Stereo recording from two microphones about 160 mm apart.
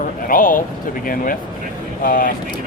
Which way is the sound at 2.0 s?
60° left (ahead or behind).